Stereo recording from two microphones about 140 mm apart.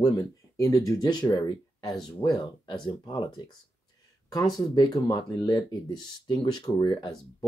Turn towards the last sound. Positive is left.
turn(degrees=35)  # may be behind; listen again after turning